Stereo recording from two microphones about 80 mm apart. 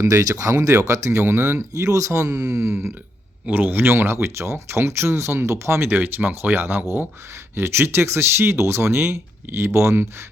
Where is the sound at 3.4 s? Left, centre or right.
Right.